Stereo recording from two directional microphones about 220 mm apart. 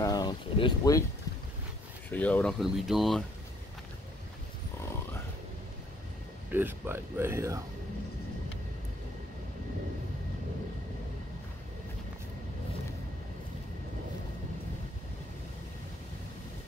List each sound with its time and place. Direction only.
0.0 s a sound: 20° left (ahead or behind)
2.0 s speech: 10° left (ahead or behind)
6.5 s speech: 10° right (ahead or behind)